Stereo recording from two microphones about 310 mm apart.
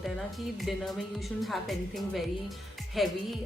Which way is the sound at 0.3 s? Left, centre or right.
Centre.